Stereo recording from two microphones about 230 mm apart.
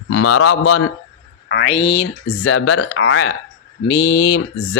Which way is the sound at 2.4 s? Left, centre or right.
Left.